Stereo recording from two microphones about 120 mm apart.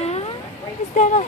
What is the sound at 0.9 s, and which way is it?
Speech, 90° left.